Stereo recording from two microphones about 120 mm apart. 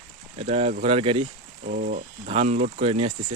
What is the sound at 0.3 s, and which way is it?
Speech, 60° right (ahead or behind).